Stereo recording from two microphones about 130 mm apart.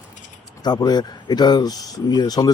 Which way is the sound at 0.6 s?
30° left (ahead or behind).